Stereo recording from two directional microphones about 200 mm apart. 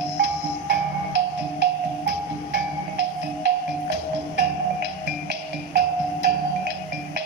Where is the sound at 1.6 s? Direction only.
55° right (ahead or behind).